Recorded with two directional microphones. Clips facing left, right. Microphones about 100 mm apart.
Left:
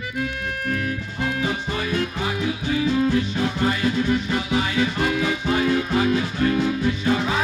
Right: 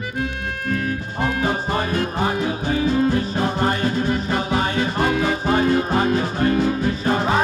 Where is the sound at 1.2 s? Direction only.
40° right (ahead or behind).